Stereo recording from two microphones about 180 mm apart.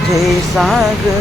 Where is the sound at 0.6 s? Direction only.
Centre (ahead or behind).